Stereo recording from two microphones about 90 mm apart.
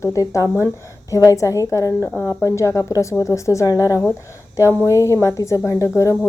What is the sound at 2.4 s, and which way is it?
A woman's voice, 35° left (ahead or behind).